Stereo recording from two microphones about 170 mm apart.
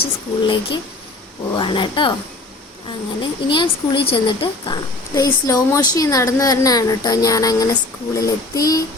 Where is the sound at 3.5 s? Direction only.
30° left (ahead or behind).